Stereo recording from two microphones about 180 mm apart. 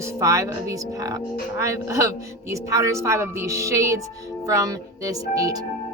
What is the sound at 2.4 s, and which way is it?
Speech, 15° right (ahead or behind).